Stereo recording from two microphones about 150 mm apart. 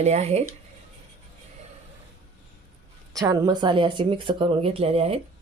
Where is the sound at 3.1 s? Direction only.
25° right (ahead or behind); by 5.2 s 40° right (ahead or behind).